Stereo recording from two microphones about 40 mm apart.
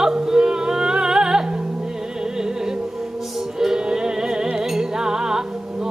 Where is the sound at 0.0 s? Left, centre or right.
Centre.